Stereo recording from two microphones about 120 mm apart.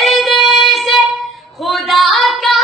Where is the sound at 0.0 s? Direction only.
Centre (ahead or behind).